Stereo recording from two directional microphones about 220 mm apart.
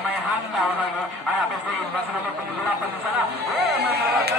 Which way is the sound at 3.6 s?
45° right (ahead or behind).